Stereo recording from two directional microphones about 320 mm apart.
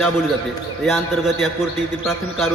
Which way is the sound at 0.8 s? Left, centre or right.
Centre.